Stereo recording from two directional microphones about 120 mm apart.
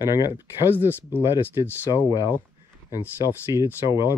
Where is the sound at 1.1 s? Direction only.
20° right (ahead or behind).